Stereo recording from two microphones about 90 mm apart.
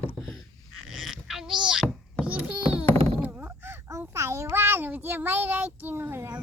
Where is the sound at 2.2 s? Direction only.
15° right (ahead or behind); by 4.0 s 30° right (ahead or behind).